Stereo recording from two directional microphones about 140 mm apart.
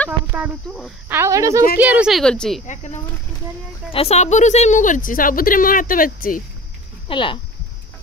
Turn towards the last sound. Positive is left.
turn(degrees=35)  # may be behind; listen again after turning